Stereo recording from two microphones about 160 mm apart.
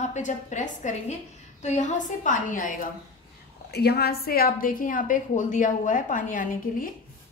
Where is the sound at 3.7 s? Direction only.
85° left.